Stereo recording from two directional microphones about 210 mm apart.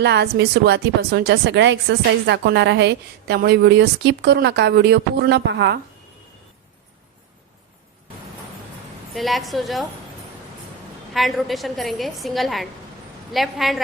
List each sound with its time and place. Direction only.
0.0 s a woman's voice: 55° right (ahead or behind)
9.1 s a woman's voice: centre (ahead or behind)
11.1 s a woman's voice: centre (ahead or behind)